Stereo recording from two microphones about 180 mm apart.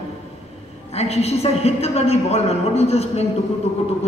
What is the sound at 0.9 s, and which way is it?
Speech, 35° left (ahead or behind).